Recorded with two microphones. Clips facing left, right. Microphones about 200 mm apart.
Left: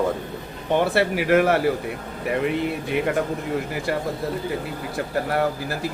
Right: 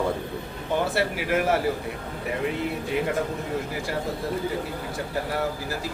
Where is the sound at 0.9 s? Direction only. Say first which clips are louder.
Left 6 dB; 65° left (ahead or behind).